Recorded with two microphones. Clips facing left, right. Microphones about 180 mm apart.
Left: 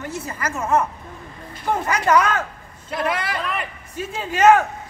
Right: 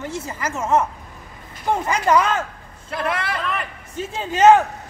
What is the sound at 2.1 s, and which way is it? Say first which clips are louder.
Speech: left 1 dB; 25° right (ahead or behind).